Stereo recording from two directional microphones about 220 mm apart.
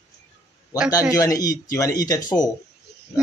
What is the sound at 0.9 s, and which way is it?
Speech, 15° left (ahead or behind).